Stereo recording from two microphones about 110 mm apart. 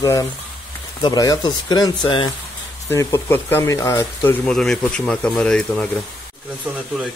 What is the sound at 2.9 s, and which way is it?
Speech, 25° left (ahead or behind).